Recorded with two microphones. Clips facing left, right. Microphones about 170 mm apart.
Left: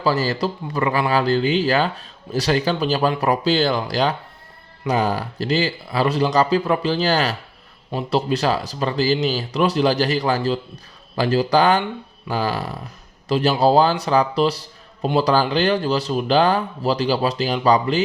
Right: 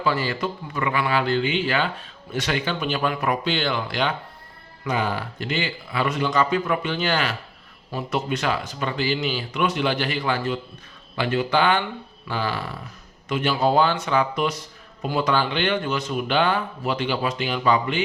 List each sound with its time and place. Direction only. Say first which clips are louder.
0.0 s a man's voice: left 4 dB; 40° left (ahead or behind)